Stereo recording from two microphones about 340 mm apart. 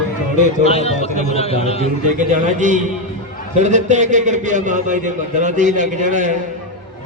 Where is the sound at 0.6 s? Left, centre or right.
Centre.